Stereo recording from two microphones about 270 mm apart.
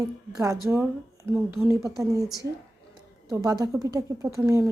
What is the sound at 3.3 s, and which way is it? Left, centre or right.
A woman's voice, centre.